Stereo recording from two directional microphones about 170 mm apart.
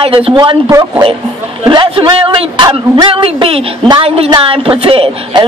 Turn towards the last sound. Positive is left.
turn(degrees=-30)  # may be behind; listen again after turning